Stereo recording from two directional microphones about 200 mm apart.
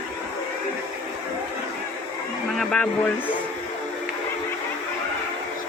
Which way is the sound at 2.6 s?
5° left (ahead or behind).